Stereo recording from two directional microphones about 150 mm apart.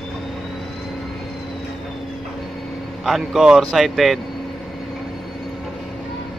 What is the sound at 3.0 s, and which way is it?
A man's voice, centre (ahead or behind).